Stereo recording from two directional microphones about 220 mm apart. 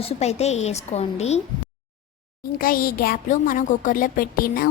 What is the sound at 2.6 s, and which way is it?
A woman's voice, 40° left (ahead or behind).